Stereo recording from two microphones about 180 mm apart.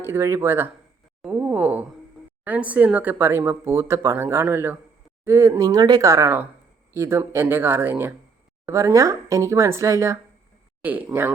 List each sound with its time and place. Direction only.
0.0 s speech: 15° right (ahead or behind)